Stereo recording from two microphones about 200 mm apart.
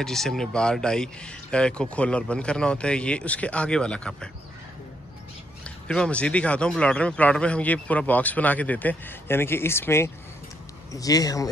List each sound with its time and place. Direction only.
0.0 s speech: centre (ahead or behind)
5.6 s a man's voice: 5° left (ahead or behind)